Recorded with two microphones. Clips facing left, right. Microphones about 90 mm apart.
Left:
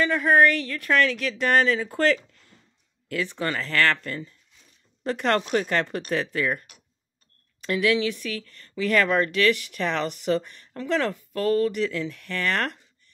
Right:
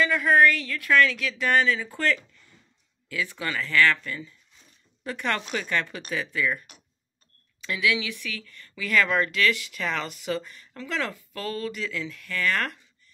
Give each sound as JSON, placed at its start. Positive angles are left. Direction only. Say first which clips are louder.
{"t": 0.0, "sound": "speech", "louder": "left 1 dB", "side_deg": 40}
{"t": 3.3, "sound": "speech", "louder": "left 4 dB", "side_deg": 35}
{"t": 3.5, "sound": "speech", "louder": "right 2 dB", "side_deg": 50}
{"t": 5.3, "sound": "speech", "louder": "left 5 dB", "side_deg": 45}
{"t": 7.6, "sound": "speech", "louder": "left 4 dB", "side_deg": 45}